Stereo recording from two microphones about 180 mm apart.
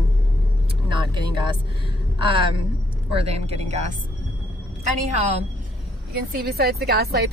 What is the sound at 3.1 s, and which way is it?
Speech, 35° right (ahead or behind).